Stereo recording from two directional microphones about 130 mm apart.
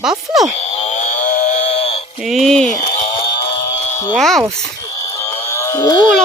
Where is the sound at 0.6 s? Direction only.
55° left (ahead or behind).